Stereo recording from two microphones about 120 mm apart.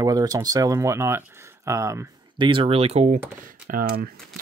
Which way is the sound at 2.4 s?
45° right (ahead or behind).